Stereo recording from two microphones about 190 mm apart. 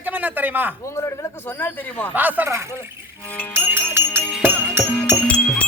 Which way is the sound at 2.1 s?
10° right (ahead or behind).